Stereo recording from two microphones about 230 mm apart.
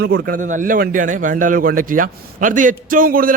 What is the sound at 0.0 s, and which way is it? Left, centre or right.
A man's voice, right.